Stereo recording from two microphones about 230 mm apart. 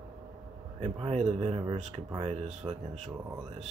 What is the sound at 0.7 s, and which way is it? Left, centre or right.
Speech, right.